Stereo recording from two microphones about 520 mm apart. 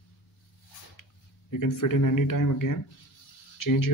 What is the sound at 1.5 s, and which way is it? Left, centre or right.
Speech, left.